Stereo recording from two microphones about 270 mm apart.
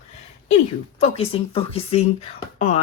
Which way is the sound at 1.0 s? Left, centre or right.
Left.